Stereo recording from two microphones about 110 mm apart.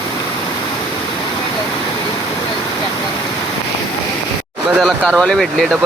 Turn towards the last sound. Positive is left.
turn(degrees=5)  # may be behind; listen again after turning